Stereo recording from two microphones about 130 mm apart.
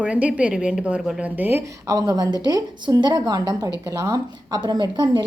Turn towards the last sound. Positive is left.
turn(degrees=-35)  # may be behind; listen again after turning